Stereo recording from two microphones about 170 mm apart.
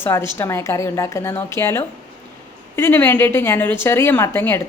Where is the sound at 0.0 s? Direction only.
15° left (ahead or behind).